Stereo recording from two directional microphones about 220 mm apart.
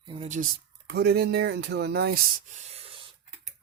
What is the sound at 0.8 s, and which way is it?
Speech, 45° right (ahead or behind).